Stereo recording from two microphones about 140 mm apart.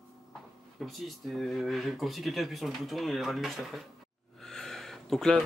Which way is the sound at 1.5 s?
Centre (ahead or behind).